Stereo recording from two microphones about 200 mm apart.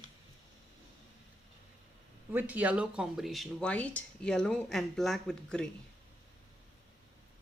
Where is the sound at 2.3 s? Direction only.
10° right (ahead or behind).